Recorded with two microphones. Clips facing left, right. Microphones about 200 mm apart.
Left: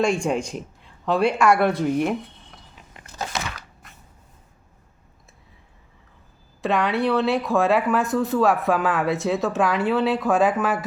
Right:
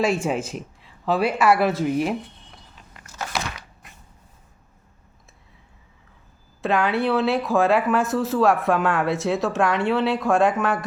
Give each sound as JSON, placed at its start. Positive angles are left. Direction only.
{"t": 0.0, "sound": "speech", "side_deg": -5}
{"t": 3.0, "sound": "a sound", "side_deg": 20}
{"t": 6.6, "sound": "speech", "side_deg": 0}